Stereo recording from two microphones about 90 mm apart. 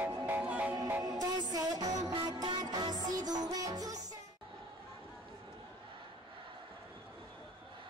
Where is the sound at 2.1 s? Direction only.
55° right (ahead or behind).